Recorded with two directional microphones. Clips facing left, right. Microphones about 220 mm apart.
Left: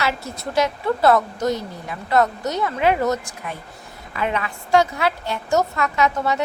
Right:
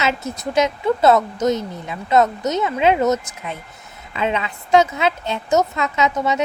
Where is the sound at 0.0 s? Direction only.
20° right (ahead or behind).